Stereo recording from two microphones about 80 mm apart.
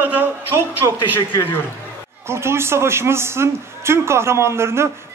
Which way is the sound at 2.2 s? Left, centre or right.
Right.